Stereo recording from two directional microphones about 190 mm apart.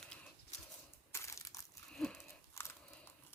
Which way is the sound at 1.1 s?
15° left (ahead or behind).